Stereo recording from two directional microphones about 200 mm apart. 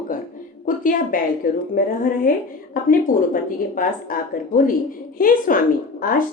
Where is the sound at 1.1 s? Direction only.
45° left (ahead or behind).